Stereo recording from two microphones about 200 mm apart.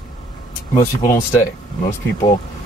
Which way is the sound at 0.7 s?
15° left (ahead or behind).